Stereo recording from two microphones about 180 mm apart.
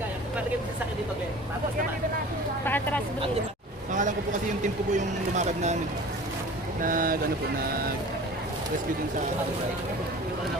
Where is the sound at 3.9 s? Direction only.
45° right (ahead or behind).